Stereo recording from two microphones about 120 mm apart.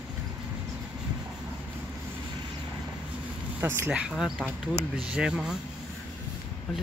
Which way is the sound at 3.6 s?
20° right (ahead or behind).